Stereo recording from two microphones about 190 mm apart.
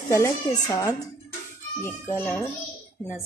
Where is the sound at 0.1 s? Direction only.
15° left (ahead or behind).